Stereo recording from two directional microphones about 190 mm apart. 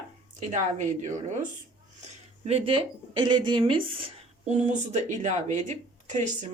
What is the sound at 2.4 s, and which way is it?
Speech, 30° right (ahead or behind).